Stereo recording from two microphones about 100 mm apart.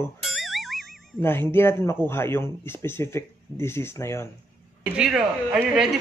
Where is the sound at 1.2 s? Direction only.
20° left (ahead or behind).